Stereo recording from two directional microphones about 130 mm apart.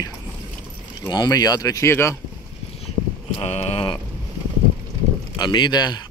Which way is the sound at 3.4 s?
50° left (ahead or behind).